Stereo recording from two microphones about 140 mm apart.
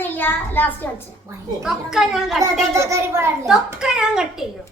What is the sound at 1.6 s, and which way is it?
A woman's voice, 5° right (ahead or behind).